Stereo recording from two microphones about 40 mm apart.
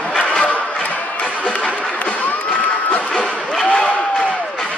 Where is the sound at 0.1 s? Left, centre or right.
Left.